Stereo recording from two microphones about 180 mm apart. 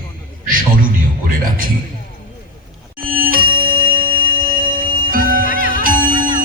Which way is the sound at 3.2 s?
50° right (ahead or behind).